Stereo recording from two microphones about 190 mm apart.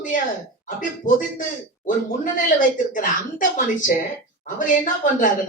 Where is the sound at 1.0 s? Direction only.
40° left (ahead or behind).